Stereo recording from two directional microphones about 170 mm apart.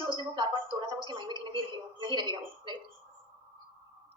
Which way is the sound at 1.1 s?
30° right (ahead or behind).